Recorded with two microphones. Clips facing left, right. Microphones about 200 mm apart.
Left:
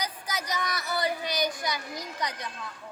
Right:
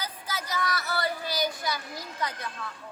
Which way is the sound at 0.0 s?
15° left (ahead or behind).